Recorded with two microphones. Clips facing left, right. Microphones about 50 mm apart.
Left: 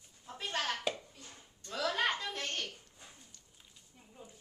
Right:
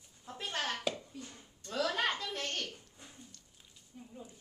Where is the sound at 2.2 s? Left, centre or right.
Left.